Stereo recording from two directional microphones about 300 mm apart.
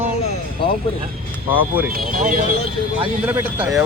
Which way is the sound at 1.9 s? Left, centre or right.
Right.